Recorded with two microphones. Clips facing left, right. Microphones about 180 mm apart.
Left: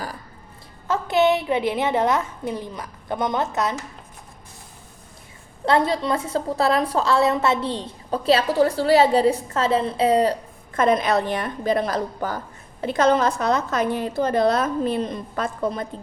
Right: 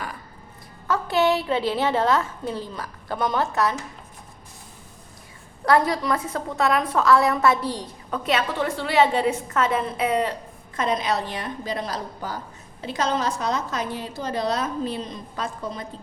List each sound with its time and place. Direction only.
0.9 s a woman's voice: 20° left (ahead or behind)
5.6 s a woman's voice: 25° left (ahead or behind)
10.8 s a woman's voice: 55° left (ahead or behind)